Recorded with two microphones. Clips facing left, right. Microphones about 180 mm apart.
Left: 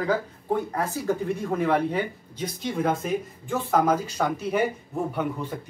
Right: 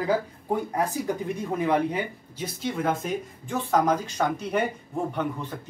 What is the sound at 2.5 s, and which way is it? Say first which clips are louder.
Speech: left 1 dB; centre (ahead or behind).